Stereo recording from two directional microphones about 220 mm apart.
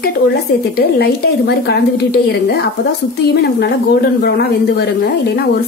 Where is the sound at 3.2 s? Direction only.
50° left (ahead or behind).